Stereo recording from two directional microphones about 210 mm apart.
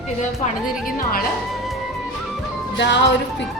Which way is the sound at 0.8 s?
45° left (ahead or behind).